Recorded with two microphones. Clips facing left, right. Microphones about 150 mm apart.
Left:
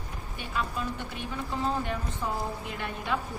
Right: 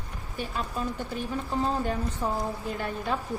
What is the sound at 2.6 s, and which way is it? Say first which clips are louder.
Speech: right 4 dB; 35° right (ahead or behind).